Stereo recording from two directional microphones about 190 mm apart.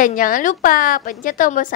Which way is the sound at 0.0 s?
45° left (ahead or behind).